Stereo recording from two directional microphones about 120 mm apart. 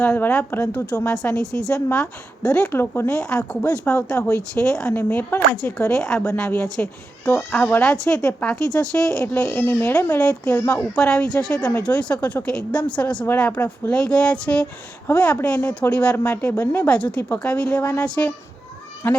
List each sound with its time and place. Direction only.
0.0 s speech: 10° left (ahead or behind)
2.7 s speech: 20° left (ahead or behind)
5.9 s a woman's voice: 5° left (ahead or behind)
6.3 s speech: 15° left (ahead or behind)
7.9 s a woman's voice: 5° left (ahead or behind)
9.6 s speech: 20° left (ahead or behind)
10.2 s speech: 10° left (ahead or behind)
10.6 s speech: 25° left (ahead or behind)
10.9 s speech: 5° left (ahead or behind)